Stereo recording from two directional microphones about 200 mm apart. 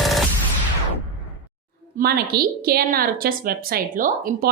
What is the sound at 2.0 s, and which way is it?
A woman's voice, 50° right (ahead or behind).